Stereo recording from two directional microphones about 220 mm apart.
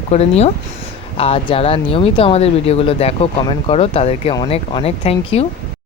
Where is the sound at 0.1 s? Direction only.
30° left (ahead or behind).